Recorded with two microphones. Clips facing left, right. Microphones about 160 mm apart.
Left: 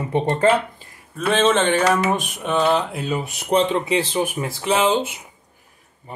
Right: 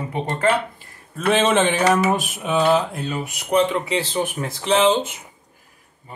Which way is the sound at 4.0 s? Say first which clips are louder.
Left 2 dB; 10° left (ahead or behind).